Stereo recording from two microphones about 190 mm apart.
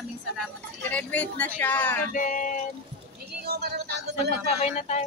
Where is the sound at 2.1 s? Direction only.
45° left (ahead or behind).